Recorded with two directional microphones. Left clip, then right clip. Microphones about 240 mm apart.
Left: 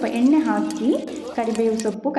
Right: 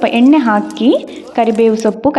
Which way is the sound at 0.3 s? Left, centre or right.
Right.